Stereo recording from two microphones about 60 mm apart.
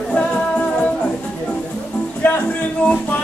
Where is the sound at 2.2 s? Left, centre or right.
Left.